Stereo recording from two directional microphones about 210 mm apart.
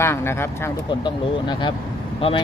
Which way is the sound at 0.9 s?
20° left (ahead or behind).